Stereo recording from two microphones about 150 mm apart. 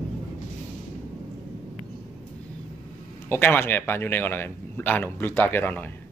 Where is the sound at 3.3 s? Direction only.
15° left (ahead or behind).